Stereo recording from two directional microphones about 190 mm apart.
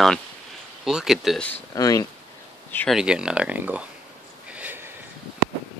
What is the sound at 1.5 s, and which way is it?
Speech, 20° left (ahead or behind).